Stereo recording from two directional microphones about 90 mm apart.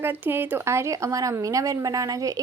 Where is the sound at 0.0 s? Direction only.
25° right (ahead or behind).